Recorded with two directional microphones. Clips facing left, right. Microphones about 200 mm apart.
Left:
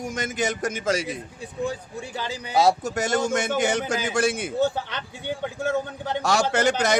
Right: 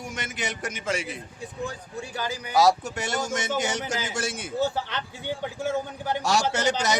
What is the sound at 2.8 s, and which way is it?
A man's voice, 45° left (ahead or behind).